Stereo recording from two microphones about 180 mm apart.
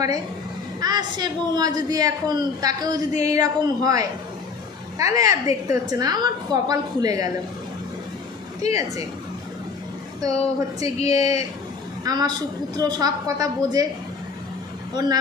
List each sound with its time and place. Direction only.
0.7 s a woman's voice: 20° right (ahead or behind)
8.6 s speech: 20° right (ahead or behind)
10.2 s a woman's voice: 20° right (ahead or behind)